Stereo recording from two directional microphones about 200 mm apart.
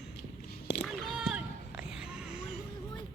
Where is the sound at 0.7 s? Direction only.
55° left (ahead or behind).